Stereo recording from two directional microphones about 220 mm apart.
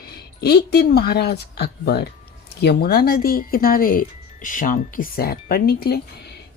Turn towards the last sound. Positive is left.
turn(degrees=45)  # may be behind; listen again after turning